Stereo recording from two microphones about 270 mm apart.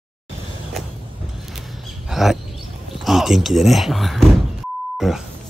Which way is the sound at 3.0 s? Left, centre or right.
Centre.